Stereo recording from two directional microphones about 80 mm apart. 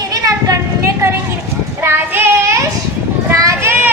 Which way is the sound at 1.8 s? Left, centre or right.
Right.